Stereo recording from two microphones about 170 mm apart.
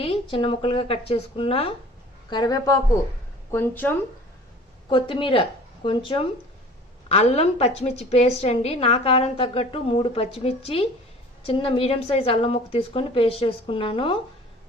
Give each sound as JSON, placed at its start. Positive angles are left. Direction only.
{"t": 0.0, "sound": "a woman's voice", "side_deg": 35}
{"t": 2.3, "sound": "a man's voice", "side_deg": 25}
{"t": 4.9, "sound": "a woman's voice", "side_deg": 30}